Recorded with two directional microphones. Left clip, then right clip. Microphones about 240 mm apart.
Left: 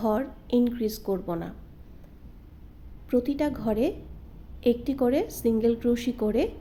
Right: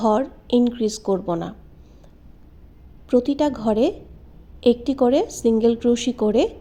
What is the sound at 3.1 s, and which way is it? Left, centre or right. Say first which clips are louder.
A woman's voice: right 7 dB; centre.